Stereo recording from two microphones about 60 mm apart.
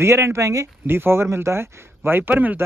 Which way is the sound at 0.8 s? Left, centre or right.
Right.